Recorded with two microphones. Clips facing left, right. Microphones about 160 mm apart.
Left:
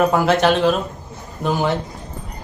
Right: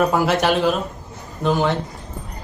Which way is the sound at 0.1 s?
10° right (ahead or behind).